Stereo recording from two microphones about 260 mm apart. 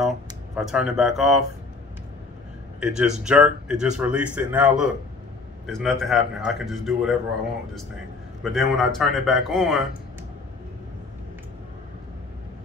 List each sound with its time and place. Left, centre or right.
0.6 s a man's voice: centre
2.8 s a man's voice: centre
8.4 s a man's voice: centre